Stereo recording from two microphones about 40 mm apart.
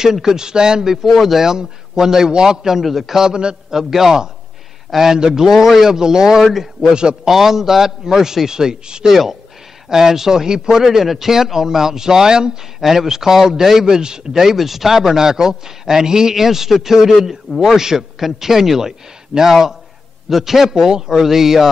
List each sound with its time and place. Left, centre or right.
0.0 s a man's voice: centre
1.0 s speech: centre
1.4 s a man's voice: centre
6.2 s speech: centre
6.9 s a man's voice: right
7.2 s a man's voice: centre
9.1 s a man's voice: centre
12.8 s a man's voice: centre
17.7 s a man's voice: centre